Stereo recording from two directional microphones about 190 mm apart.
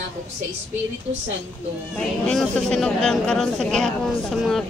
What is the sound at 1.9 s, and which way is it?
Speech, 5° left (ahead or behind).